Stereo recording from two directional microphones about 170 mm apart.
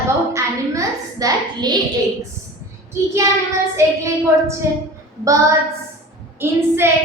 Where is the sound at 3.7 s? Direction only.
15° right (ahead or behind).